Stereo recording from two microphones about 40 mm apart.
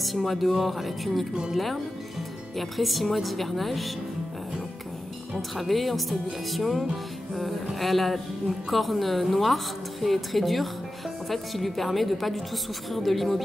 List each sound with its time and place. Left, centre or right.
0.0 s a woman's voice: centre
5.3 s a woman's voice: centre